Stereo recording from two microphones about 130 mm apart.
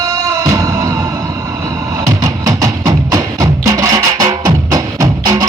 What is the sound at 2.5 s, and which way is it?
Music, 25° right (ahead or behind).